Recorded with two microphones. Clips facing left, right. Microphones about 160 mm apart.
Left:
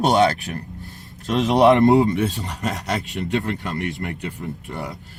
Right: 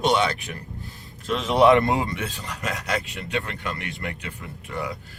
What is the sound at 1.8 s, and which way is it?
Speech, 40° left (ahead or behind).